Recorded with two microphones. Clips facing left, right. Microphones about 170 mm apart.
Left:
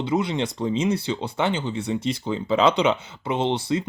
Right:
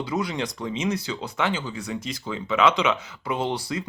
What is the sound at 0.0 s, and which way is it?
Speech, 25° left (ahead or behind).